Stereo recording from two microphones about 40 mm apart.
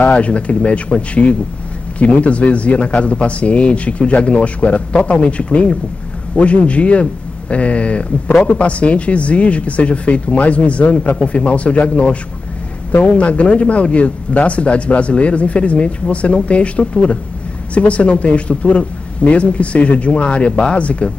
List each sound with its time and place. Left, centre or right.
0.0 s speech: left